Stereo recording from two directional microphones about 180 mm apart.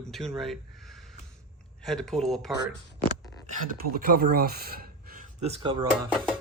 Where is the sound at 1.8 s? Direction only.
Centre (ahead or behind).